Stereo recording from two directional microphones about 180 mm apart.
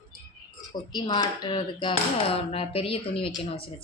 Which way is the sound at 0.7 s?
25° left (ahead or behind).